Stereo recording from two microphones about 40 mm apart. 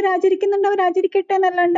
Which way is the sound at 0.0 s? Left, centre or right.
Centre.